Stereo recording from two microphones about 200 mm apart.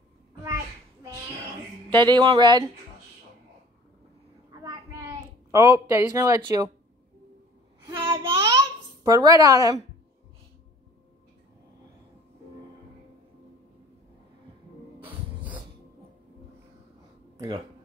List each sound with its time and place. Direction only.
1.9 s speech: 20° right (ahead or behind)
4.5 s a sound: 15° right (ahead or behind)
7.8 s babbling: 15° right (ahead or behind)